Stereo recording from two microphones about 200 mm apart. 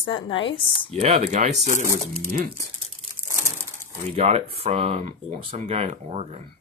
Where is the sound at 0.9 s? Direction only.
30° right (ahead or behind).